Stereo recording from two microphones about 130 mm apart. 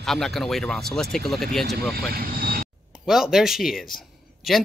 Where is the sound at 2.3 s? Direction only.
90° right.